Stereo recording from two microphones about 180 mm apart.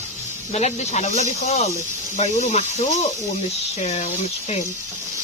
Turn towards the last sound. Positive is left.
turn(degrees=40)  # may be behind; listen again after turning